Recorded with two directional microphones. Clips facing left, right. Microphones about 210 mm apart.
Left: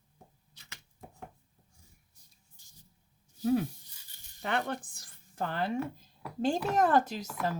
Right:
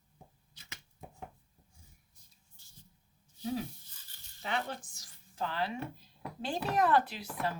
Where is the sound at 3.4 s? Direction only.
55° left (ahead or behind).